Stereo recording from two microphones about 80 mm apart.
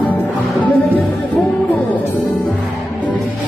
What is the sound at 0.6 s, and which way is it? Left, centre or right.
Music, centre.